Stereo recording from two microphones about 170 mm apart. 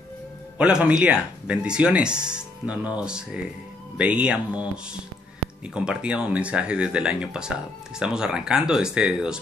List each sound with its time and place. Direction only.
0.6 s speech: 5° right (ahead or behind)
5.8 s speech: 5° right (ahead or behind)